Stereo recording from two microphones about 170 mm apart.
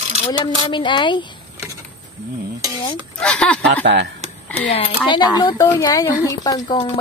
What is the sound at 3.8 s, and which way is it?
Speech, 90° right.